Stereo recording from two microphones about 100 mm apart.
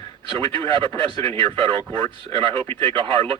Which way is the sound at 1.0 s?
65° right (ahead or behind).